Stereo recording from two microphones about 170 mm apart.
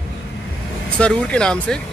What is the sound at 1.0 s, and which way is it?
Speech, 5° left (ahead or behind).